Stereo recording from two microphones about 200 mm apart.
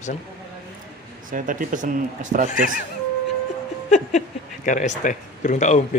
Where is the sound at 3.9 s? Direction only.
35° left (ahead or behind).